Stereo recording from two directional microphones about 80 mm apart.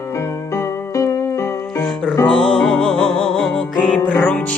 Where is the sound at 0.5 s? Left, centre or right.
Left.